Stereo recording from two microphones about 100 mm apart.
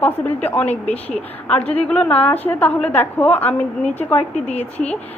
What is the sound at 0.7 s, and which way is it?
Speech, 90° left.